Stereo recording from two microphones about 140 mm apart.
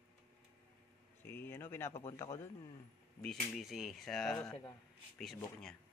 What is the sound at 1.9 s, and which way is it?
Speech, 45° left (ahead or behind).